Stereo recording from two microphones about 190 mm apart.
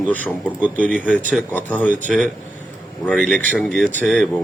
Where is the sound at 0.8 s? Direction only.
5° left (ahead or behind).